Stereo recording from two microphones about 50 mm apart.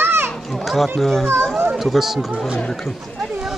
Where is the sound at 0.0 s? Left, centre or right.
Right.